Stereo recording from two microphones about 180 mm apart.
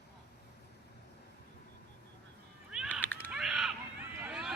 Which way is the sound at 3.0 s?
10° left (ahead or behind).